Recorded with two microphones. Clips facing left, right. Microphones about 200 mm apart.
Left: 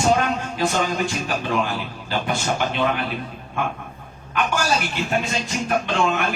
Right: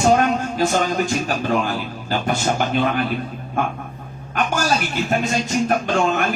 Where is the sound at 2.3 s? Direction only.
45° right (ahead or behind).